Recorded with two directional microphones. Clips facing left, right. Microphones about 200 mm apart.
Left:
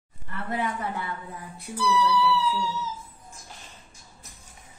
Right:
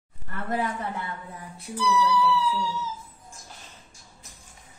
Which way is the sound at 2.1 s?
10° left (ahead or behind).